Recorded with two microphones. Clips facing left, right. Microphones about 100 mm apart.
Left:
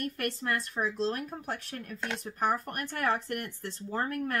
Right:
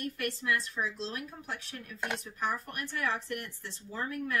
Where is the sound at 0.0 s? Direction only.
45° left (ahead or behind).